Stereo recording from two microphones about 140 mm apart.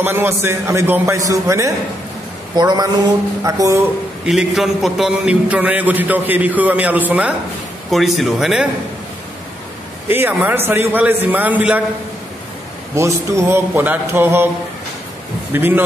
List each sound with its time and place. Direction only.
0.0 s a man's voice: 15° right (ahead or behind)
4.3 s a man's voice: centre (ahead or behind)
10.0 s a man's voice: 15° right (ahead or behind)
12.9 s a man's voice: 20° right (ahead or behind)
15.5 s a man's voice: 15° right (ahead or behind)